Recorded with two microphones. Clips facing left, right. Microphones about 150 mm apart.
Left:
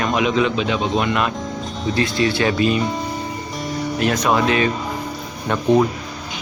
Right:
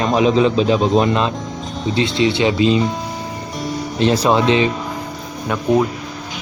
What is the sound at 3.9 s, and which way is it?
Speech, 30° right (ahead or behind).